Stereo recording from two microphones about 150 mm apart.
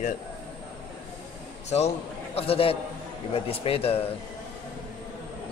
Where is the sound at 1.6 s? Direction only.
45° left (ahead or behind).